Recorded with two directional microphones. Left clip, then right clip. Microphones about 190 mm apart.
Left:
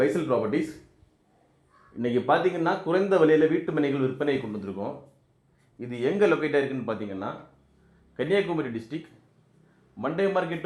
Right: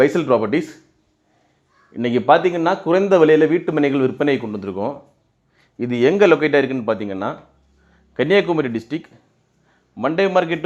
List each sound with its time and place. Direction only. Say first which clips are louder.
0.0 s a man's voice: right 9 dB; 35° right (ahead or behind)
1.9 s a man's voice: right 9 dB; 25° right (ahead or behind)
10.0 s a man's voice: right 9 dB; 25° right (ahead or behind)